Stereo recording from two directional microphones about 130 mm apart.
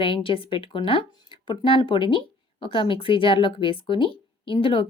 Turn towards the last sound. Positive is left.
turn(degrees=45)  # may be behind; listen again after turning